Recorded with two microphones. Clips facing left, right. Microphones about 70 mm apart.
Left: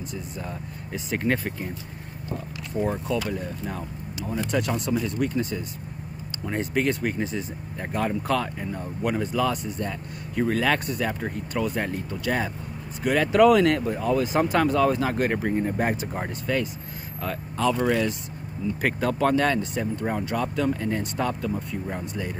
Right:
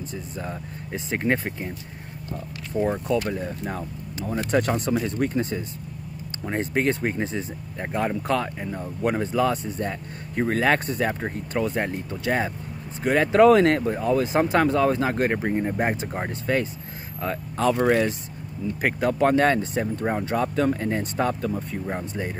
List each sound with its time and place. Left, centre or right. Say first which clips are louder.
0.9 s speech: right 1 dB; right
2.9 s speech: right 3 dB; right
7.9 s speech: right 1 dB; right
15.3 s speech: even; right
18.8 s speech: right 2 dB; centre
19.3 s speech: right 3 dB; right